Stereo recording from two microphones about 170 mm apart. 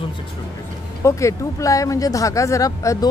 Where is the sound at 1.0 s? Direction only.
15° left (ahead or behind).